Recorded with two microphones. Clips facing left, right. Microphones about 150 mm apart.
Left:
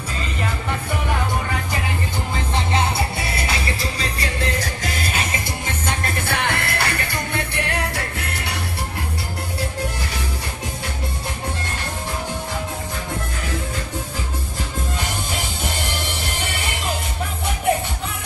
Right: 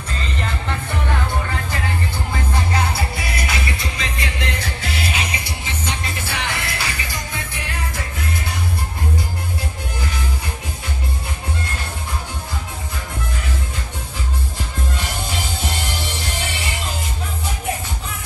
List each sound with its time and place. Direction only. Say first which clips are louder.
2.5 s music: left 2 dB; 25° left (ahead or behind); by 8.5 s 70° left (ahead or behind)